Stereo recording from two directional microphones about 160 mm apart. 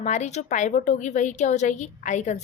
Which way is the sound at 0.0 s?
45° left (ahead or behind).